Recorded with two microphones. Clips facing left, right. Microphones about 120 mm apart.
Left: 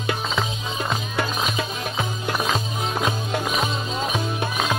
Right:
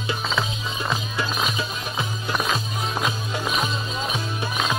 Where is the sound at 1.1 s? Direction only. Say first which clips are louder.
Left 1 dB; 60° left (ahead or behind).